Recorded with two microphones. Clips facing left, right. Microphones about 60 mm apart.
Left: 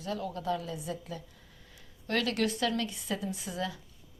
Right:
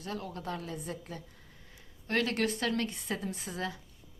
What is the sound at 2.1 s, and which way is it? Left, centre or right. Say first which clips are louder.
A woman's voice: even; right.